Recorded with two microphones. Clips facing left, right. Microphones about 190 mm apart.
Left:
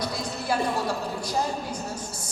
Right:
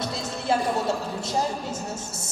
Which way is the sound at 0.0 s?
25° right (ahead or behind).